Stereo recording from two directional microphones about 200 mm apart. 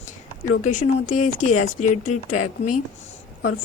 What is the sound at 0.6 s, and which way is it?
A woman's voice, 40° left (ahead or behind).